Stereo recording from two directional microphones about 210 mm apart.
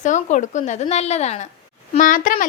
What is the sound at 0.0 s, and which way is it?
A woman's voice, 35° left (ahead or behind).